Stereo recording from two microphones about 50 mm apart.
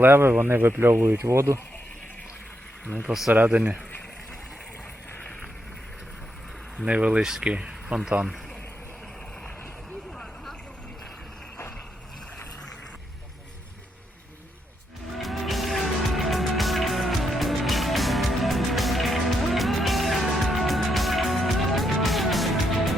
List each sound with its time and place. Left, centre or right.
0.0 s speech: right
1.2 s speech: right
3.1 s speech: centre
3.3 s speech: right
6.8 s speech: right
7.2 s speech: centre
7.9 s speech: right
15.2 s music: centre